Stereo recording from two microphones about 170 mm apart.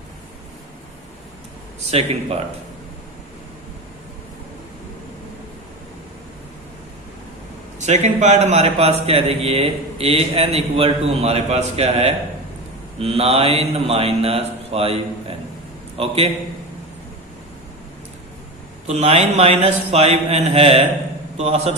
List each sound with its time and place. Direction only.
1.9 s a man's voice: 35° right (ahead or behind)
7.8 s a man's voice: 40° right (ahead or behind)
18.9 s a man's voice: 40° right (ahead or behind)